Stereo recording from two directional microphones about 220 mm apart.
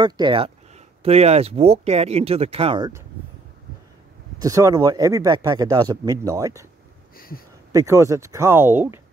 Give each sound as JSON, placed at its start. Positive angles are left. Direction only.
{"t": 0.0, "sound": "speech", "side_deg": -20}
{"t": 4.4, "sound": "speech", "side_deg": -15}
{"t": 7.2, "sound": "speech", "side_deg": 40}
{"t": 7.7, "sound": "speech", "side_deg": -15}